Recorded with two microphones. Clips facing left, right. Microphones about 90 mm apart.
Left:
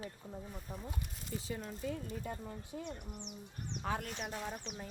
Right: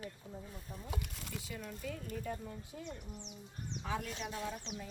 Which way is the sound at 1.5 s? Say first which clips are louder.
Left 4 dB; 30° left (ahead or behind).